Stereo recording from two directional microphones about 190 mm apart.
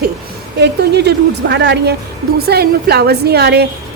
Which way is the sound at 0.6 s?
60° right (ahead or behind).